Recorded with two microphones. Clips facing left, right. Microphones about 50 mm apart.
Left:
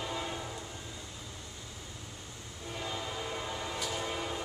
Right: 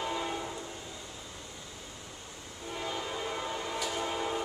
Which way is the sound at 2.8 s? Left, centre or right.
Centre.